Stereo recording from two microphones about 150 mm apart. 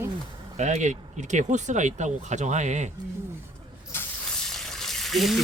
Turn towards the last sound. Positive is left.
turn(degrees=0)  # may be behind; listen again after turning